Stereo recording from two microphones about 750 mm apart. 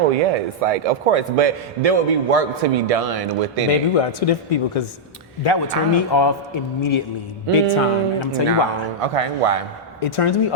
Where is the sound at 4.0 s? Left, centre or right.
Left.